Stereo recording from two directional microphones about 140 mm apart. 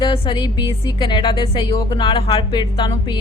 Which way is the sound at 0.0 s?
35° left (ahead or behind).